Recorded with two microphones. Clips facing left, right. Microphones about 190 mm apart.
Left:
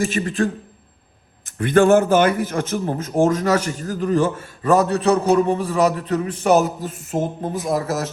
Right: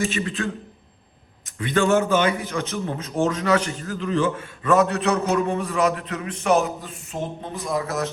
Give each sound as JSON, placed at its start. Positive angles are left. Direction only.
{"t": 0.0, "sound": "speech", "side_deg": 50}
{"t": 1.5, "sound": "a man's voice", "side_deg": 50}
{"t": 7.5, "sound": "speech", "side_deg": 5}